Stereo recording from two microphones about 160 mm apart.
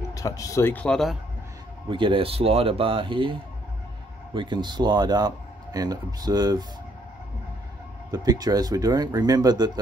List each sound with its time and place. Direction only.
0.1 s speech: 20° left (ahead or behind); by 1.1 s 5° left (ahead or behind)
1.9 s speech: 30° right (ahead or behind)
8.1 s speech: 25° right (ahead or behind)